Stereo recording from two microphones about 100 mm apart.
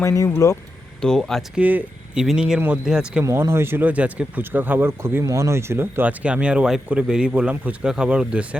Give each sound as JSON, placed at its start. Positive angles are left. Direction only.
{"t": 0.0, "sound": "speech", "side_deg": 30}
{"t": 1.0, "sound": "speech", "side_deg": 5}
{"t": 1.5, "sound": "speech", "side_deg": -15}
{"t": 3.2, "sound": "speech", "side_deg": -30}